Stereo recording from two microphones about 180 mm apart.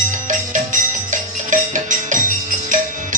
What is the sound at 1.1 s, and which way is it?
Music, 45° right (ahead or behind).